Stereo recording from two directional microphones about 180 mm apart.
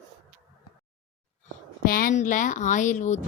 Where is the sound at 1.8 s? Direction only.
50° left (ahead or behind).